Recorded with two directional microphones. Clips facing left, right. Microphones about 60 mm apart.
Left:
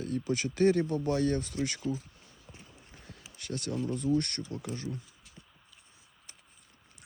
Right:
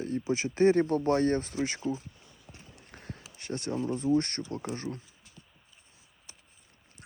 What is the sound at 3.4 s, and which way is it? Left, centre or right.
Speech, right.